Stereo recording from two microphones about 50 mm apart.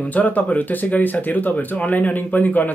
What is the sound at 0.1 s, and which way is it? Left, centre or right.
Speech, left.